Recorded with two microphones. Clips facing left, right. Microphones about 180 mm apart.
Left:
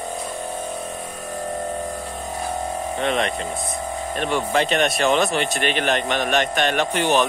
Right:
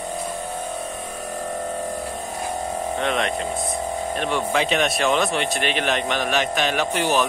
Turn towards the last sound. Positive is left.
turn(degrees=-5)  # may be behind; listen again after turning